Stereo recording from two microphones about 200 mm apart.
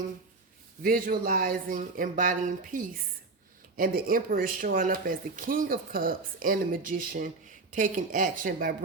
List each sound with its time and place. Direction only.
0.8 s speech: 45° right (ahead or behind)